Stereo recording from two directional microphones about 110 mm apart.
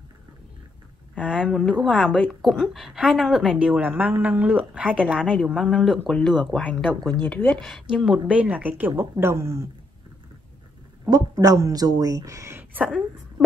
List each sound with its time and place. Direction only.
1.2 s a woman's voice: 10° right (ahead or behind)
1.5 s a woman's voice: 5° left (ahead or behind)
2.4 s a woman's voice: centre (ahead or behind)
5.2 s speech: 5° left (ahead or behind)
7.0 s speech: 35° right (ahead or behind)
7.2 s a woman's voice: 15° left (ahead or behind)
7.6 s a woman's voice: 5° right (ahead or behind); by 9.6 s 25° right (ahead or behind)
11.1 s speech: 35° right (ahead or behind)